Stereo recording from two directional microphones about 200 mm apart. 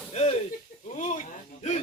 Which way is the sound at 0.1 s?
30° left (ahead or behind).